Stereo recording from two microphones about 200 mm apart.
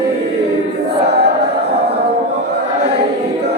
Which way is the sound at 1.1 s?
55° right (ahead or behind).